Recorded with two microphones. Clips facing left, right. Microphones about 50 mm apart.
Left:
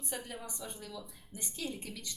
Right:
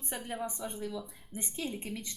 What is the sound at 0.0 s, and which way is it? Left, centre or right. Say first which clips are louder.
Speech: right 5 dB; right.